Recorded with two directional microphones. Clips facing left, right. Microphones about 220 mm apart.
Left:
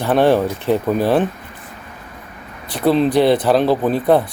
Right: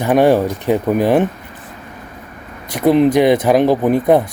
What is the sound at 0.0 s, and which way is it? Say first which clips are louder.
A man's voice: right 2 dB; 10° right (ahead or behind).